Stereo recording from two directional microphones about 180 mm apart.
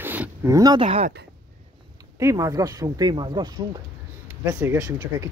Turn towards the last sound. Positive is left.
turn(degrees=-15)  # may be behind; listen again after turning